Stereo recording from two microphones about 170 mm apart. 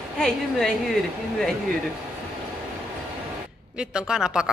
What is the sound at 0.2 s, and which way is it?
Speech, centre (ahead or behind).